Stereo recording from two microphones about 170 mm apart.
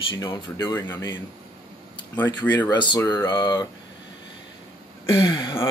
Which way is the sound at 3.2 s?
30° left (ahead or behind).